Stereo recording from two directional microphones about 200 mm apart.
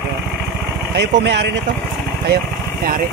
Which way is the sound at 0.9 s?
55° right (ahead or behind).